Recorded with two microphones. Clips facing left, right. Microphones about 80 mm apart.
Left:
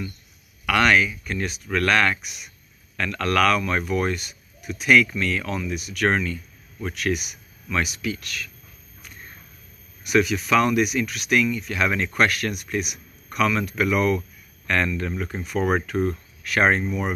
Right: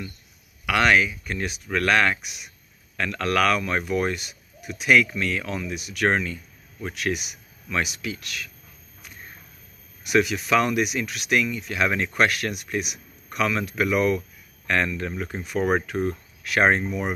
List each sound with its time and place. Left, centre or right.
0.7 s speech: right
10.0 s speech: right